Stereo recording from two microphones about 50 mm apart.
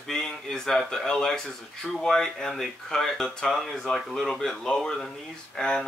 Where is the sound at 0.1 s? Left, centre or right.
Centre.